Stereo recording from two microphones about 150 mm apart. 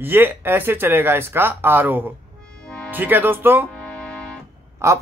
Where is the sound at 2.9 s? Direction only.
10° right (ahead or behind).